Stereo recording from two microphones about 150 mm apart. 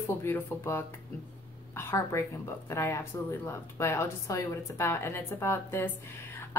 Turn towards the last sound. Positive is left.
turn(degrees=15)  # may be behind; listen again after turning